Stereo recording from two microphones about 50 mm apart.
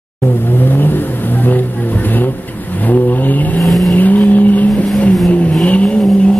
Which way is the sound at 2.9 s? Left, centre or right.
Left.